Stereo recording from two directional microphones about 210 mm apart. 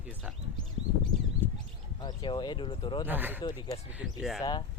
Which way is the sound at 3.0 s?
10° right (ahead or behind).